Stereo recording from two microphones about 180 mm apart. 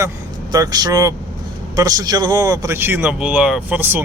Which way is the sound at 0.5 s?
20° right (ahead or behind).